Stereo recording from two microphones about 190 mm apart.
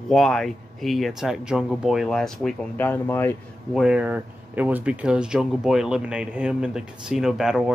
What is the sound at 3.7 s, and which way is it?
Speech, 5° right (ahead or behind).